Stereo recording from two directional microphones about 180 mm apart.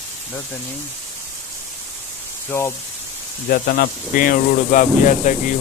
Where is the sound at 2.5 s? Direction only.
10° left (ahead or behind).